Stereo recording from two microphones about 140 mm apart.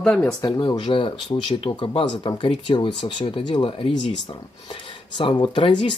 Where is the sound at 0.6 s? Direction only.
35° left (ahead or behind).